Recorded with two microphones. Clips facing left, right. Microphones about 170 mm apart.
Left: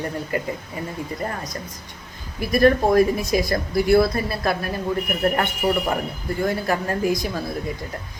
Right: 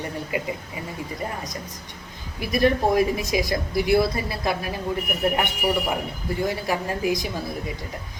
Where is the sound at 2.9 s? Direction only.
15° right (ahead or behind).